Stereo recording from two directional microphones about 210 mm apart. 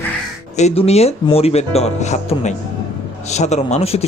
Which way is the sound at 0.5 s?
30° left (ahead or behind).